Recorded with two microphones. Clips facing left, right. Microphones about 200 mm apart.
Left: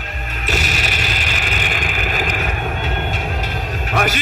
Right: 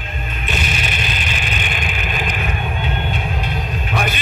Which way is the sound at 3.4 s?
80° left.